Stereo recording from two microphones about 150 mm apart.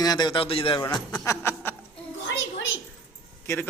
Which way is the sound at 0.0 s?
25° left (ahead or behind).